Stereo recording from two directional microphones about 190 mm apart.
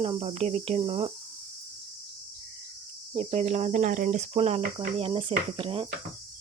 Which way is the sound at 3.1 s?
35° right (ahead or behind).